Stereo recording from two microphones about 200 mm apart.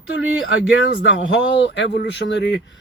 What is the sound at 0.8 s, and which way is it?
Speech, 65° left (ahead or behind).